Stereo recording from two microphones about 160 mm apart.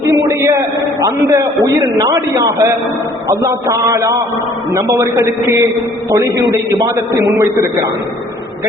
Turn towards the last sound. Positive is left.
turn(degrees=-20)  # may be behind; listen again after turning